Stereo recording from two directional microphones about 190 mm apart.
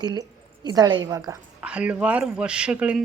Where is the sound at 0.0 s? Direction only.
20° right (ahead or behind).